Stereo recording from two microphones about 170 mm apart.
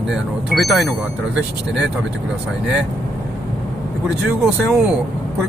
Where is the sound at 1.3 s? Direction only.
90° right.